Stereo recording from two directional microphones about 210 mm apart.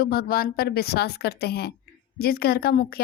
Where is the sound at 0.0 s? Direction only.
45° left (ahead or behind).